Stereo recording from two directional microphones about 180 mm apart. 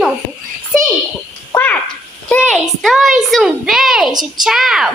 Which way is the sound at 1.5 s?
10° left (ahead or behind).